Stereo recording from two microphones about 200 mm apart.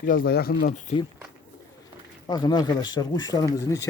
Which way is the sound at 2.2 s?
20° left (ahead or behind).